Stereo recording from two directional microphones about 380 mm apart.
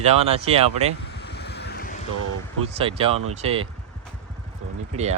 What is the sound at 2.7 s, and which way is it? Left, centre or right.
Speech, centre.